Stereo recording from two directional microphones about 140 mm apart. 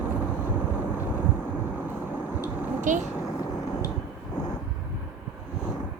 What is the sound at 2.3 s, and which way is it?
Vehicle, 15° right (ahead or behind).